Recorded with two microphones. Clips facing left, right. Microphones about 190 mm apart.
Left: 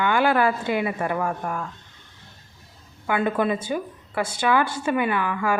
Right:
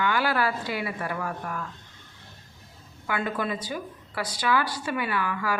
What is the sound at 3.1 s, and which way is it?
A woman's voice, 25° left (ahead or behind).